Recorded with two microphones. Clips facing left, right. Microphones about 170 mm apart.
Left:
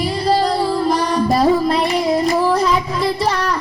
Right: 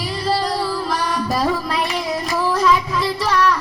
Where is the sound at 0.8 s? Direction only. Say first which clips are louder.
Left 6 dB; 35° left (ahead or behind).